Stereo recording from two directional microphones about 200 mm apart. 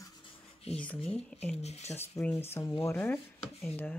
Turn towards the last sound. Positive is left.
turn(degrees=5)  # may be behind; listen again after turning